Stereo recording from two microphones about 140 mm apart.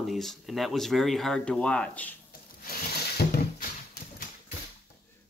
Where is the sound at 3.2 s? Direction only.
90° left.